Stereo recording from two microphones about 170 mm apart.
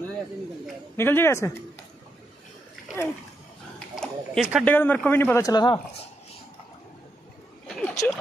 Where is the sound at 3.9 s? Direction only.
Centre (ahead or behind).